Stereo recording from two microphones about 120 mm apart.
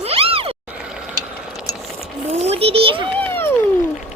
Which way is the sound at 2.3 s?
60° right (ahead or behind).